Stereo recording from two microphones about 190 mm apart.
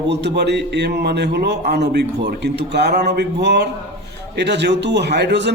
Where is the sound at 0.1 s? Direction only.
65° right (ahead or behind).